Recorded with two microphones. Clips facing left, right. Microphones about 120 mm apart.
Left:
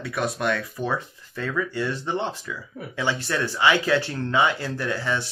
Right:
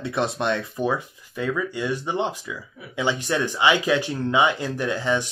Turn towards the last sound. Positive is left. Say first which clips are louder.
# right 3 dB
turn(degrees=-20)  # may be behind; listen again after turning